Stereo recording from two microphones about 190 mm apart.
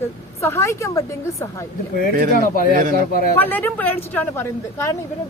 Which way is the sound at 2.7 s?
45° right (ahead or behind).